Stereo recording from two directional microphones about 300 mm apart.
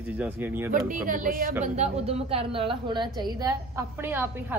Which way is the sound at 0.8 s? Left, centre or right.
Right.